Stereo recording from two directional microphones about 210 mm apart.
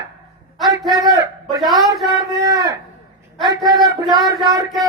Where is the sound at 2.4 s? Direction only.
20° right (ahead or behind).